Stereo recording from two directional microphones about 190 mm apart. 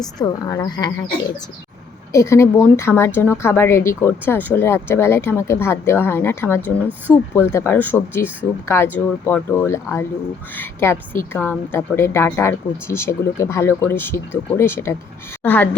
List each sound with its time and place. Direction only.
0.0 s a woman's voice: 20° left (ahead or behind)
2.1 s a woman's voice: 15° left (ahead or behind)